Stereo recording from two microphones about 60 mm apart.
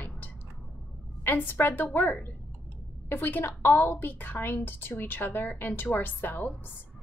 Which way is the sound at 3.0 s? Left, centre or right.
Left.